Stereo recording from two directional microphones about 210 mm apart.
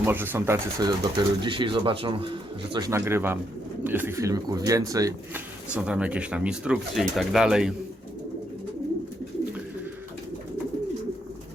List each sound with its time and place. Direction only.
0.0 s speech: 10° right (ahead or behind)